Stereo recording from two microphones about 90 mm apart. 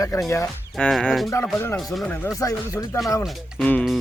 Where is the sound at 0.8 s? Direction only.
5° left (ahead or behind).